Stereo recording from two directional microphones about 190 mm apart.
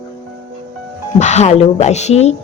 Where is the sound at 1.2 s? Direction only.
35° left (ahead or behind).